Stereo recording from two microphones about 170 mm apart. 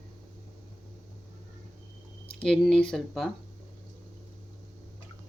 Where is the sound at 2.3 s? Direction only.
5° left (ahead or behind).